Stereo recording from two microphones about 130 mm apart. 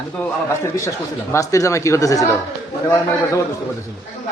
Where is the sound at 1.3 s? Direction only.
25° left (ahead or behind).